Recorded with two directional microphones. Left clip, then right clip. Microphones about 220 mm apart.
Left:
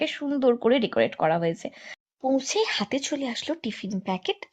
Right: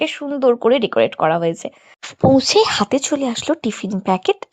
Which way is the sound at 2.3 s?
45° right (ahead or behind).